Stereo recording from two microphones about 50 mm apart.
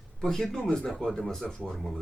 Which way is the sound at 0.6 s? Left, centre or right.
Left.